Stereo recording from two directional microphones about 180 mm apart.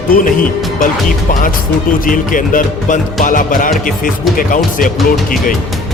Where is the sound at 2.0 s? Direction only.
50° left (ahead or behind).